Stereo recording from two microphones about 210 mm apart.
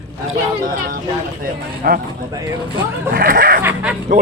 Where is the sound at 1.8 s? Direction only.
45° right (ahead or behind).